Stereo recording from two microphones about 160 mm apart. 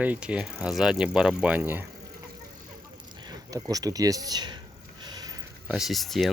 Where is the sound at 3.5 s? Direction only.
20° right (ahead or behind).